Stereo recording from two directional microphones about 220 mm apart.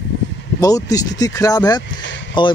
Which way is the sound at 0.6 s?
15° left (ahead or behind).